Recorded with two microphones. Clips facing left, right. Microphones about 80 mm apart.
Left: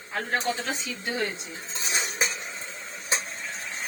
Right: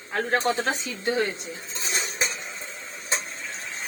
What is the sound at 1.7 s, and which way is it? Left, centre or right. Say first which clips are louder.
Dishes: left 1 dB; centre.